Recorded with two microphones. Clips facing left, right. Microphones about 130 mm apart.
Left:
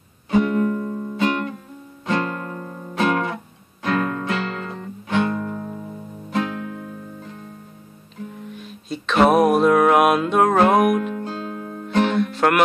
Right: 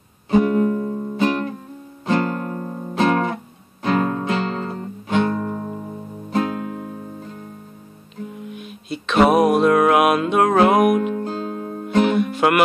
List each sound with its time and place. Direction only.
0.3 s music: 30° right (ahead or behind)
8.5 s music: 5° right (ahead or behind)
11.1 s music: 40° right (ahead or behind)
12.0 s music: 10° right (ahead or behind)